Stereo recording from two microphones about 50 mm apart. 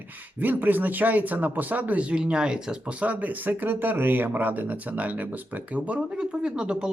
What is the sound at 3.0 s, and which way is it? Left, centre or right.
Speech, right.